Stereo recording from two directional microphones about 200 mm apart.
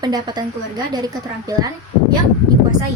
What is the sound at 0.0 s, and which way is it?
A woman's voice, 20° right (ahead or behind).